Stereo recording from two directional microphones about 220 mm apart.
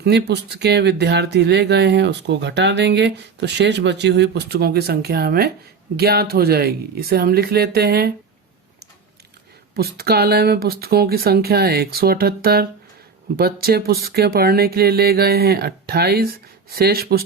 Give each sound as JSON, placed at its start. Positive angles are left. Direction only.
{"t": 0.0, "sound": "speech", "side_deg": -50}
{"t": 9.7, "sound": "speech", "side_deg": -45}